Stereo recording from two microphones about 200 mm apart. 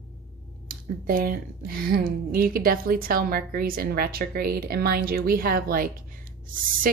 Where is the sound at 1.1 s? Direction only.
45° right (ahead or behind).